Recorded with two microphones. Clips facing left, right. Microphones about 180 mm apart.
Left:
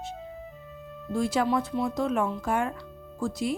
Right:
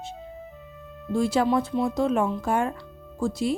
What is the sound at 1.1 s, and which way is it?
Speech, 30° right (ahead or behind).